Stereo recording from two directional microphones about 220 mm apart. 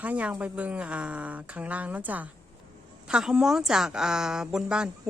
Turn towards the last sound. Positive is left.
turn(degrees=-5)  # may be behind; listen again after turning